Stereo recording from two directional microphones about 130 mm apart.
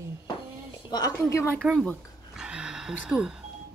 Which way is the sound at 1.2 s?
20° left (ahead or behind).